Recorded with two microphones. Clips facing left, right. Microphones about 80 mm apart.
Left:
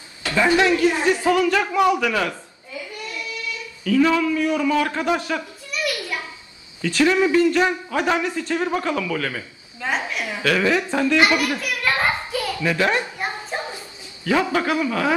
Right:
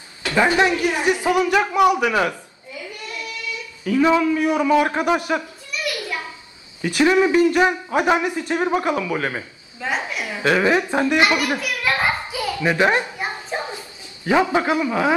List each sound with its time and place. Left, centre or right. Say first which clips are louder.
0.3 s a man's voice: even; right
3.8 s a man's voice: right 1 dB; right
6.8 s a man's voice: right 2 dB; right
9.8 s a woman's voice: even; centre
10.4 s a man's voice: right 2 dB; right
11.6 s a sound: even; centre
12.6 s a man's voice: right 3 dB; right
14.2 s a man's voice: right 2 dB; right